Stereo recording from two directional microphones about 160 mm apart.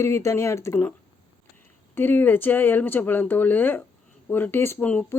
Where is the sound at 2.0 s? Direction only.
10° left (ahead or behind).